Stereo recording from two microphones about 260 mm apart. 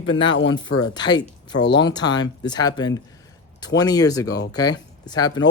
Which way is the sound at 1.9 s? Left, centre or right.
Centre.